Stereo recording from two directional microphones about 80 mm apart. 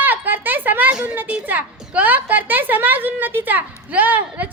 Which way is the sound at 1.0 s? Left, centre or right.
Right.